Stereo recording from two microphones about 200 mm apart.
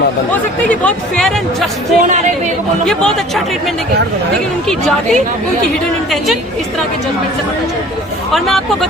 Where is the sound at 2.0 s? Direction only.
35° right (ahead or behind).